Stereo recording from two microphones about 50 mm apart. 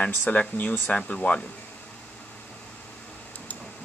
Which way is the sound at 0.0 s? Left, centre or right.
Left.